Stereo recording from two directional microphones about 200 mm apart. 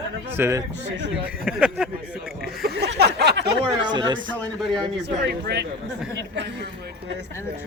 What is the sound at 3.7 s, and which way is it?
Speech, 20° right (ahead or behind).